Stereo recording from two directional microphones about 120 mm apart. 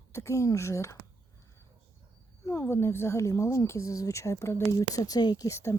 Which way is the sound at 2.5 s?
20° left (ahead or behind).